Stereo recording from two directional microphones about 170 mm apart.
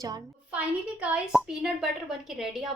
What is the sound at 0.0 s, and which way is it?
Speech, 25° right (ahead or behind).